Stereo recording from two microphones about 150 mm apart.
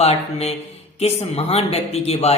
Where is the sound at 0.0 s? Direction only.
45° left (ahead or behind).